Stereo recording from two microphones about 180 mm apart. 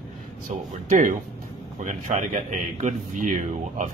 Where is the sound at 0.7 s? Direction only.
45° right (ahead or behind).